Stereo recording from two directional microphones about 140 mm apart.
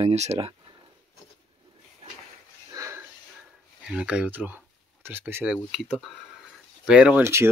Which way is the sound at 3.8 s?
10° right (ahead or behind).